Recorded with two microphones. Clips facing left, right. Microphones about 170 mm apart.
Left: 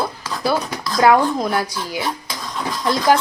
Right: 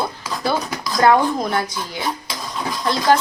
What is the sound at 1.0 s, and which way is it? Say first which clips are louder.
Speech: left 1 dB; 5° left (ahead or behind).